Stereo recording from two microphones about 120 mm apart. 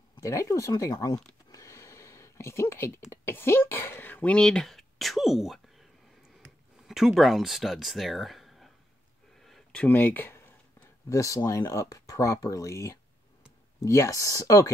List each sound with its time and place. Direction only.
0.2 s speech: 25° left (ahead or behind)
1.5 s a sound: 25° left (ahead or behind)
3.1 s speech: 20° left (ahead or behind); by 5.9 s centre (ahead or behind)
6.9 s speech: 5° right (ahead or behind)
9.4 s a sound: 5° left (ahead or behind)
11.1 s speech: 25° left (ahead or behind)